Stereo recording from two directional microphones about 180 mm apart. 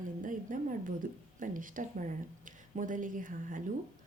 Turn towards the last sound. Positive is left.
turn(degrees=-50)  # may be behind; listen again after turning